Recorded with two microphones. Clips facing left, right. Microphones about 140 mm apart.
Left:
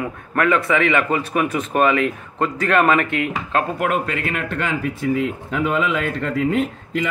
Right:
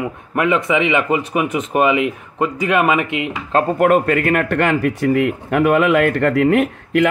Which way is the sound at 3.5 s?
45° right (ahead or behind).